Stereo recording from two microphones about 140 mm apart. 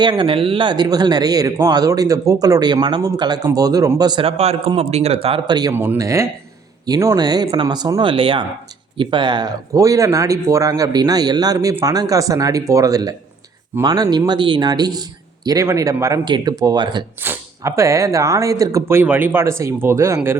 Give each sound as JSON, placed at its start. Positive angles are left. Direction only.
{"t": 0.0, "sound": "speech", "side_deg": -35}
{"t": 5.7, "sound": "speech", "side_deg": -15}
{"t": 17.2, "sound": "speech", "side_deg": -20}